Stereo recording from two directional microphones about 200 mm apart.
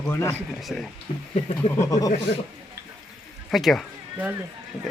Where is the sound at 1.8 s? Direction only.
15° left (ahead or behind).